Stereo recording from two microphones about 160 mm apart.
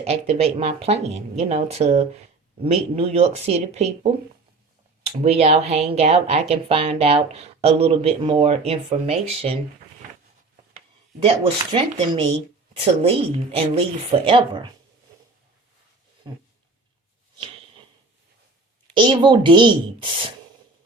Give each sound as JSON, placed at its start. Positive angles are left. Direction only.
{"t": 0.0, "sound": "speech", "side_deg": -40}
{"t": 11.2, "sound": "speech", "side_deg": -35}
{"t": 16.2, "sound": "a woman's voice", "side_deg": -30}
{"t": 18.9, "sound": "a woman's voice", "side_deg": -30}